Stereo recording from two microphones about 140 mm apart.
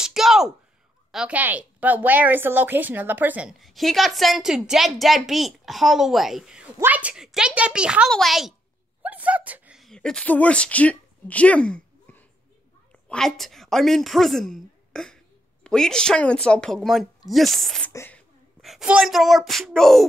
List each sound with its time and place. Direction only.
0.0 s a sound: centre (ahead or behind)
1.1 s a woman's voice: 10° right (ahead or behind)
9.0 s a sound: 10° right (ahead or behind); by 12.3 s 10° left (ahead or behind)
13.1 s a woman's voice: 5° left (ahead or behind)
17.9 s speech: 15° left (ahead or behind)
18.6 s a woman's voice: centre (ahead or behind)